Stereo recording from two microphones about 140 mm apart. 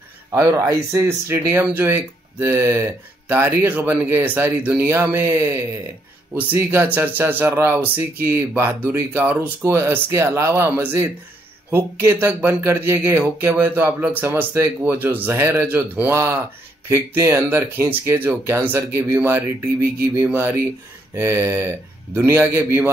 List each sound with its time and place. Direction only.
0.3 s speech: 25° right (ahead or behind)
21.1 s a sound: 20° right (ahead or behind)
22.1 s speech: 15° right (ahead or behind)